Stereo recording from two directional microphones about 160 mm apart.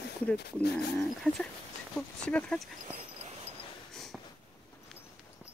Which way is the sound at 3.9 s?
Centre (ahead or behind).